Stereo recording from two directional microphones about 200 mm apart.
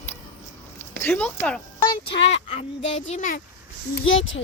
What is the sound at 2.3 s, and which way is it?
Speech, 35° left (ahead or behind).